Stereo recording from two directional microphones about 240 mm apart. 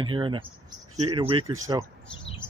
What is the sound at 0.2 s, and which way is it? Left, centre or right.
Speech, right.